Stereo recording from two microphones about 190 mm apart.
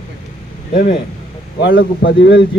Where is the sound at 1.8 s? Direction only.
50° left (ahead or behind).